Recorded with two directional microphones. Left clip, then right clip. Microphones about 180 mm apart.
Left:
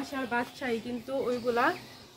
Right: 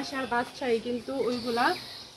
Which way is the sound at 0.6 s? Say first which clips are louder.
Right 5 dB; 20° left (ahead or behind).